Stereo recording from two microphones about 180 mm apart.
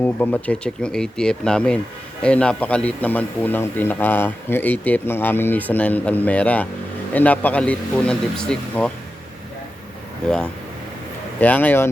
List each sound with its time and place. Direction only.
0.0 s speech: 10° left (ahead or behind)
10.2 s speech: 5° left (ahead or behind)